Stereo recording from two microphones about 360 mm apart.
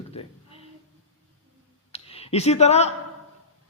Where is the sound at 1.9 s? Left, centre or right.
Centre.